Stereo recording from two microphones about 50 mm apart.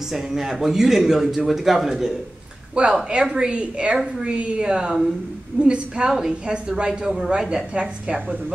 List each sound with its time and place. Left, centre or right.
0.1 s a woman's voice: centre
2.8 s a woman's voice: right